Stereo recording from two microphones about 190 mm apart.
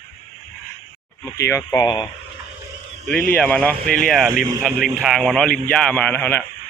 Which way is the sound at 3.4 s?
5° left (ahead or behind).